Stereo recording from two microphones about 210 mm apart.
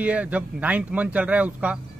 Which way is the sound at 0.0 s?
5° right (ahead or behind).